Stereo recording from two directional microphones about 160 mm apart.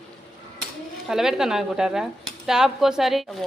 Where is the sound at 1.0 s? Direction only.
Centre (ahead or behind).